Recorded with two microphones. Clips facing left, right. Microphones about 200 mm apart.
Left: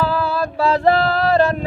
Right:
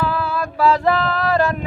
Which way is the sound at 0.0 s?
35° left (ahead or behind).